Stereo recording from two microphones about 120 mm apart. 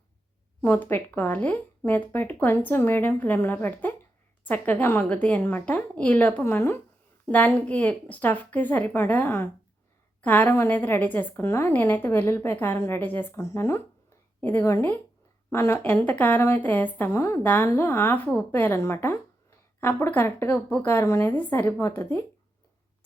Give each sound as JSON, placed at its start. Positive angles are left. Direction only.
{"t": 0.6, "sound": "a woman's voice", "side_deg": 15}